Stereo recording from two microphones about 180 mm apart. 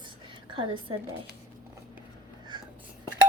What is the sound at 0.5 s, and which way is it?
Speech, 25° right (ahead or behind).